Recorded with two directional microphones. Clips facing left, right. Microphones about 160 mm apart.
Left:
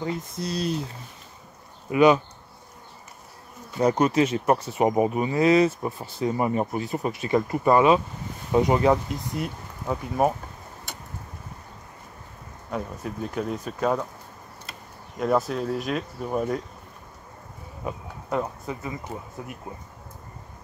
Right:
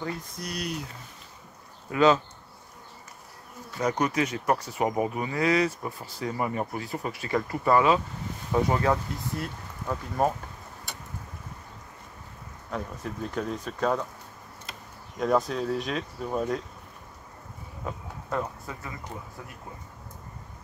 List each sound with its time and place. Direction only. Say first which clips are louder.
0.0 s speech: left 5 dB; 20° left (ahead or behind)
1.9 s speech: left 3 dB; 15° left (ahead or behind)
3.7 s speech: left 6 dB; 25° left (ahead or behind)
12.7 s speech: left 3 dB; 5° left (ahead or behind)
15.1 s speech: left 1 dB; 5° left (ahead or behind)
17.8 s speech: left 3 dB; 20° left (ahead or behind)